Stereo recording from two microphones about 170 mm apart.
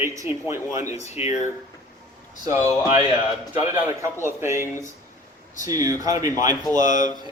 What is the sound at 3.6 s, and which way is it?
A man's voice, 15° right (ahead or behind).